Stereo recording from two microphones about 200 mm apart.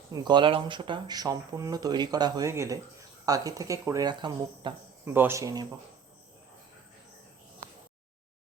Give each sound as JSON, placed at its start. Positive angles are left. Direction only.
{"t": 0.1, "sound": "speech", "side_deg": -20}
{"t": 5.1, "sound": "speech", "side_deg": -10}